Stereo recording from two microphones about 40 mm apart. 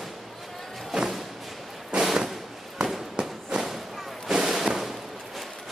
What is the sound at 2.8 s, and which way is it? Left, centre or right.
Fireworks, centre.